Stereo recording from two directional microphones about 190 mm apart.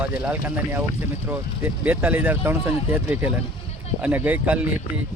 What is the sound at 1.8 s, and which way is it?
Speech, 10° right (ahead or behind).